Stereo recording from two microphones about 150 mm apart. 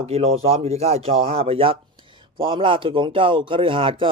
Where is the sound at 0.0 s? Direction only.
40° right (ahead or behind).